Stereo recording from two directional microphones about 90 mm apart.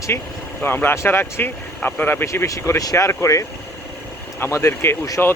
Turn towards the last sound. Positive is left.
turn(degrees=20)  # may be behind; listen again after turning